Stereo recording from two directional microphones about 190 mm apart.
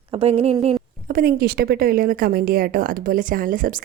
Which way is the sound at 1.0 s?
50° right (ahead or behind).